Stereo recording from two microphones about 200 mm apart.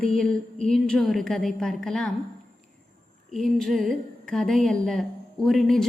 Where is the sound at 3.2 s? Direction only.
Centre (ahead or behind).